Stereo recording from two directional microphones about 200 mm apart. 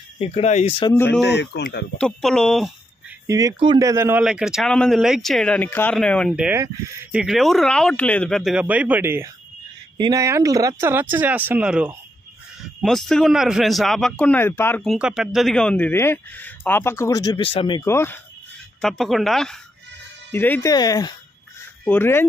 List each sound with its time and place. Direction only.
0.2 s speech: 30° left (ahead or behind)
0.9 s a man's voice: 10° left (ahead or behind)
1.2 s speech: 60° left (ahead or behind)
2.0 s speech: 5° left (ahead or behind)
3.3 s speech: 15° right (ahead or behind)
4.2 s a man's voice: 5° right (ahead or behind); by 18.2 s 10° left (ahead or behind)
18.8 s a man's voice: centre (ahead or behind)